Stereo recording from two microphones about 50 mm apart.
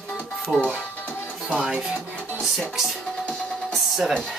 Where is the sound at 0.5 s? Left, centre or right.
Centre.